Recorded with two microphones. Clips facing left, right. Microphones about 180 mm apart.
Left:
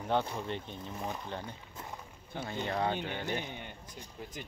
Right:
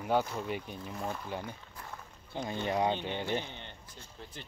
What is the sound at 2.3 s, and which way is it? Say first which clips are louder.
Speech: right 3 dB; 15° right (ahead or behind).